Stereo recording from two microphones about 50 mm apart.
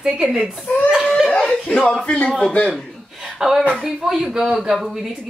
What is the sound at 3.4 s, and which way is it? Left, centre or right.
Speech, centre.